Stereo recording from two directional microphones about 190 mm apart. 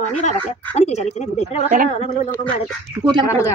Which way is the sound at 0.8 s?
35° left (ahead or behind).